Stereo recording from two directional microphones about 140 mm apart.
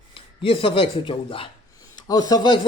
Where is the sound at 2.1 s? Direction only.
25° left (ahead or behind).